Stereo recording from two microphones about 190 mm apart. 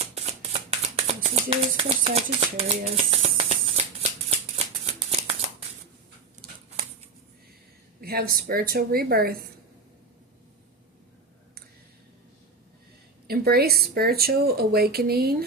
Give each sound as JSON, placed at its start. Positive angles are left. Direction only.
{"t": 0.0, "sound": "a sound", "side_deg": -35}
{"t": 4.3, "sound": "shuffling cards", "side_deg": -30}
{"t": 8.0, "sound": "a woman's voice", "side_deg": -55}
{"t": 13.2, "sound": "speech", "side_deg": -55}